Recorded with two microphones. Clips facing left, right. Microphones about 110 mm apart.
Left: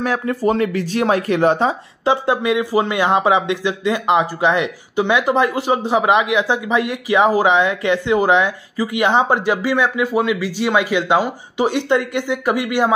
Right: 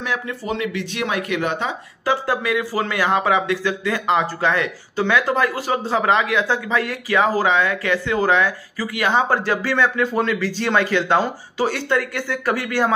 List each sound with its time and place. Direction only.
0.0 s speech: 45° left (ahead or behind)
2.0 s speech: 20° left (ahead or behind)